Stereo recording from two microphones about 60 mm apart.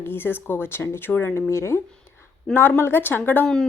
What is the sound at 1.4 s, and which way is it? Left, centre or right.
Speech, left.